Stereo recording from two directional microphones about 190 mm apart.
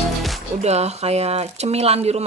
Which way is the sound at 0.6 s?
35° right (ahead or behind).